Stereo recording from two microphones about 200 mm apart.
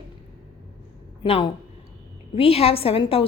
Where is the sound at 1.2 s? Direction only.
25° left (ahead or behind).